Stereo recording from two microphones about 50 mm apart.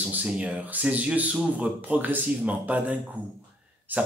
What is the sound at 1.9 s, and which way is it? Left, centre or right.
A man's voice, right.